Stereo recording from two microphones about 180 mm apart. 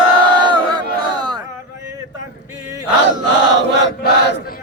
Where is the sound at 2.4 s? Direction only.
20° right (ahead or behind).